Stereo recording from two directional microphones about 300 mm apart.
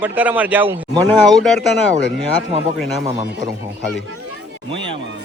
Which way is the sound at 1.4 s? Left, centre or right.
Centre.